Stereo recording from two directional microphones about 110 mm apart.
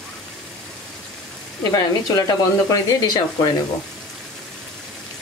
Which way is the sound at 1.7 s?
35° left (ahead or behind).